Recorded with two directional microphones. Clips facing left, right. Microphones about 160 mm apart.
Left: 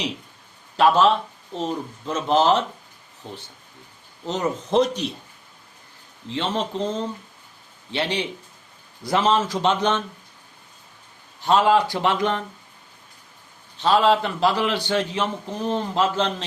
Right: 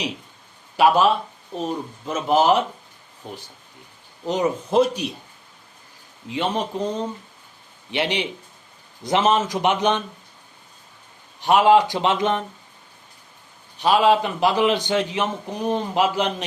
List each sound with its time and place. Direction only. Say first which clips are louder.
0.8 s a man's voice: even; 10° right (ahead or behind)
4.3 s a man's voice: right 2 dB; 10° right (ahead or behind)
6.2 s a man's voice: right 1 dB; 15° right (ahead or behind)
11.3 s a man's voice: right 3 dB; 15° right (ahead or behind)
13.7 s a man's voice: right 1 dB; 15° right (ahead or behind)